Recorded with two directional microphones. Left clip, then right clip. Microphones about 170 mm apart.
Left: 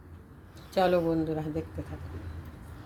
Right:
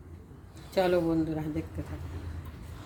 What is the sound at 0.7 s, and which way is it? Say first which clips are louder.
Speech: left 1 dB; 10° left (ahead or behind).